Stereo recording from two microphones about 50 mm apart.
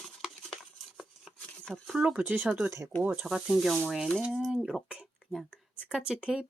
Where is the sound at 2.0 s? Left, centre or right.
Right.